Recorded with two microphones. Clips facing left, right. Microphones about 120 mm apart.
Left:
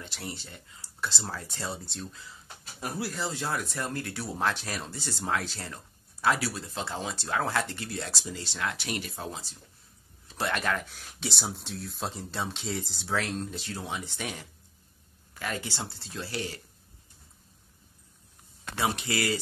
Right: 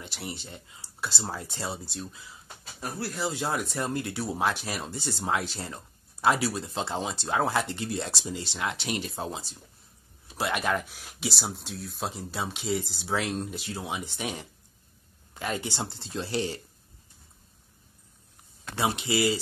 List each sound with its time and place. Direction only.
0.0 s speech: 15° right (ahead or behind)
1.9 s speech: 10° right (ahead or behind)
2.8 s speech: 5° left (ahead or behind)
3.2 s speech: 15° right (ahead or behind)
13.1 s speech: 15° right (ahead or behind)
18.8 s speech: 20° right (ahead or behind)